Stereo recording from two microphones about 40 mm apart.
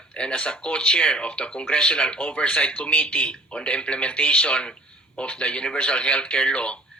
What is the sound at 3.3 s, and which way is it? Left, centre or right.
Speech, left.